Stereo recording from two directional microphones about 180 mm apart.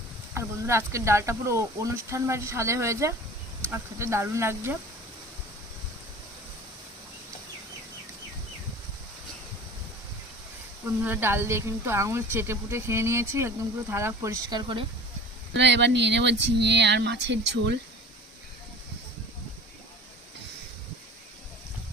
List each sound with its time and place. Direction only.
0.3 s speech: 15° right (ahead or behind)
11.0 s speech: 10° right (ahead or behind)
15.5 s speech: 75° right (ahead or behind)